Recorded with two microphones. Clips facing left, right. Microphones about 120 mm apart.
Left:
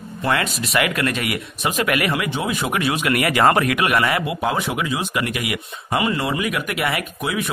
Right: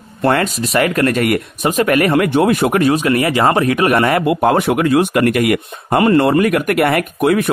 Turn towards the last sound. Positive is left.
turn(degrees=-60)  # may be behind; listen again after turning